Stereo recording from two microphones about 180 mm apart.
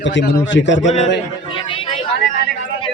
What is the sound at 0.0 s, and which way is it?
Speech, 85° left.